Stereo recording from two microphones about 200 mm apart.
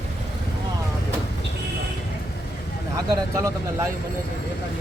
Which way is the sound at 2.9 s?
15° right (ahead or behind).